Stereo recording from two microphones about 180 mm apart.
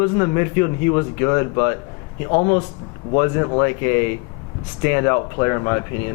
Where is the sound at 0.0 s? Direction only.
20° left (ahead or behind).